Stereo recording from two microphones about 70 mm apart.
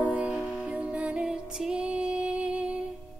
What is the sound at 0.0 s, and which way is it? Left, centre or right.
Music, right.